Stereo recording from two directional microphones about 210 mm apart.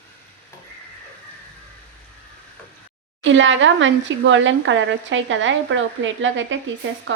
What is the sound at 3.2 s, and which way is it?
Speech, 65° right (ahead or behind).